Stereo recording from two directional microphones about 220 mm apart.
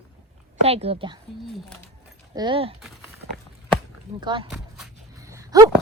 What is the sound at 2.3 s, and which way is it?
Speech, 20° right (ahead or behind).